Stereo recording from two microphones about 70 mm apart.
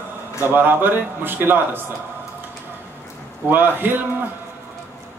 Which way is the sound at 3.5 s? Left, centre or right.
Right.